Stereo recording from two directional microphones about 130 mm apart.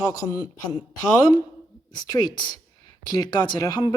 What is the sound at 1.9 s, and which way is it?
Speech, 35° left (ahead or behind).